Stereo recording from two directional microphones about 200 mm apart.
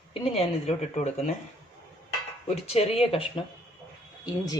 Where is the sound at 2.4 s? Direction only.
30° left (ahead or behind).